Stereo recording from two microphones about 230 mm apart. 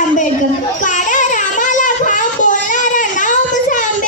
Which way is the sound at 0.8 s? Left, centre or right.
Left.